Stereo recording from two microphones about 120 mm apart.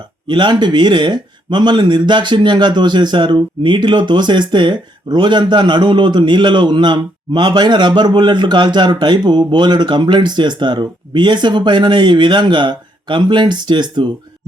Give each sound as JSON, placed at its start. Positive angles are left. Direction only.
{"t": 0.3, "sound": "speech", "side_deg": -40}